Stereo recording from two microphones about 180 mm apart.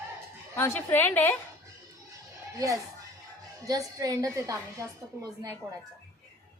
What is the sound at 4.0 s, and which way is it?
Speech, 20° right (ahead or behind).